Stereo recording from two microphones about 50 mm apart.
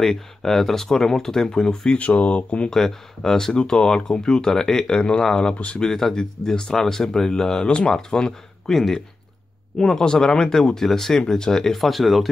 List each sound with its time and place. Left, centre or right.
0.0 s speech: centre
2.0 s speech: left
2.7 s speech: centre
5.8 s speech: centre